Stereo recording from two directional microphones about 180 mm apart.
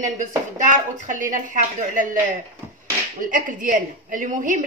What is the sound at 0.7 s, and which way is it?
A woman's voice, 45° right (ahead or behind).